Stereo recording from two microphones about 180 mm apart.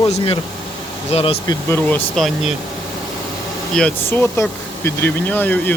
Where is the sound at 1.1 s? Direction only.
30° left (ahead or behind).